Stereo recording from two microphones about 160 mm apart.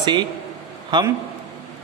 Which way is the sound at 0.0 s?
30° right (ahead or behind).